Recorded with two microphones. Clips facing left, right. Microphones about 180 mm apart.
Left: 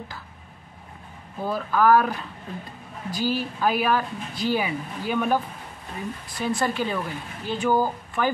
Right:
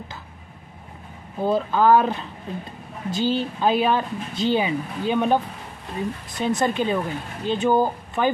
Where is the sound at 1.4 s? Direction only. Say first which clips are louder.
Right 3 dB; 20° right (ahead or behind).